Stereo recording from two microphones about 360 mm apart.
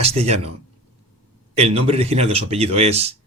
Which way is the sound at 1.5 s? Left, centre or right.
Centre.